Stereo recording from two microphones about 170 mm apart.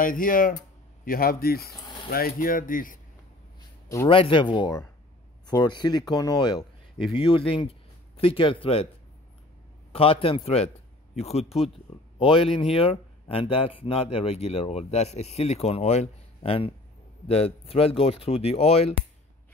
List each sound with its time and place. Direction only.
0.0 s speech: 55° left (ahead or behind)
4.1 s speech: 30° left (ahead or behind)
9.9 s speech: 35° left (ahead or behind)